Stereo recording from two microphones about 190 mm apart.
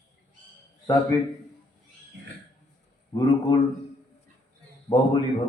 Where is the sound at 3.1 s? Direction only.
20° left (ahead or behind).